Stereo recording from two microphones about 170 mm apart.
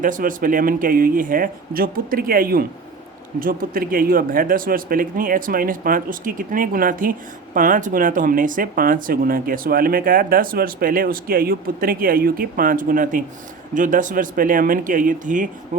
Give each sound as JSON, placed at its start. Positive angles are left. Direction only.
{"t": 0.0, "sound": "speech", "side_deg": -50}